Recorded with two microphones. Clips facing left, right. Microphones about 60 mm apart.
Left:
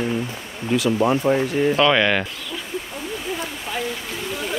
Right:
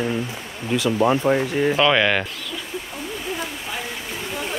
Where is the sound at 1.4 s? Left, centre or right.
Centre.